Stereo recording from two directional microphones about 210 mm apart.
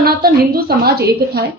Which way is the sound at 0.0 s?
45° right (ahead or behind).